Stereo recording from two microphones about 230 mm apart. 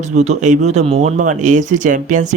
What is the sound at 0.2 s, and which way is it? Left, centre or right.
A man's voice, right.